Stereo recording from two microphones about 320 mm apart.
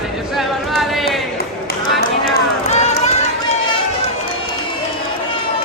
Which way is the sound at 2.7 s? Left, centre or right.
Left.